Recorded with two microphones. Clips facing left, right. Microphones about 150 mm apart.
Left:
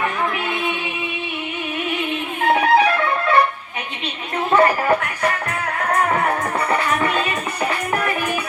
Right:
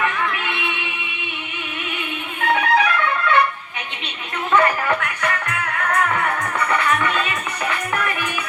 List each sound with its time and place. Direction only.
0.0 s music: 35° left (ahead or behind)
2.5 s music: 30° left (ahead or behind)
4.5 s music: 35° left (ahead or behind)